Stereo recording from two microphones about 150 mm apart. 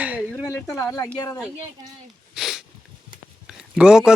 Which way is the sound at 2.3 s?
Centre (ahead or behind).